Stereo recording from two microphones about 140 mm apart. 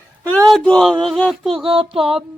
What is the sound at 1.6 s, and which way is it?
Speech, 40° right (ahead or behind).